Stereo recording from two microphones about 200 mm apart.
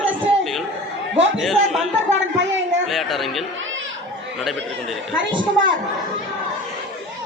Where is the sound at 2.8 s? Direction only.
Centre (ahead or behind).